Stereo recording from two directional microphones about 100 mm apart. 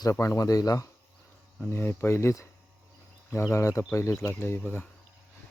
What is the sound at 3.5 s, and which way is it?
Speech, 30° left (ahead or behind).